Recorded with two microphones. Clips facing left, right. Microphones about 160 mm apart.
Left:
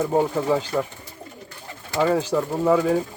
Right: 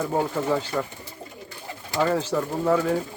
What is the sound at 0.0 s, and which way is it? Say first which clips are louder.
Speech: left 4 dB; 15° left (ahead or behind).